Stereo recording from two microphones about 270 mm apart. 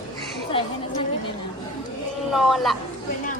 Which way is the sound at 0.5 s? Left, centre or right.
Centre.